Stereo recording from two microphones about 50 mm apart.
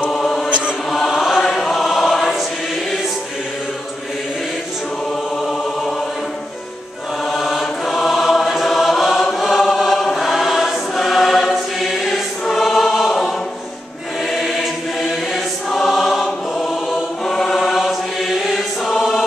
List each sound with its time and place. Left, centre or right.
0.1 s chant: centre
0.5 s chant: right
0.8 s choir: centre
5.4 s a sound: centre
7.2 s chant: centre
9.2 s chant: centre
9.5 s choir: centre
14.3 s choir: centre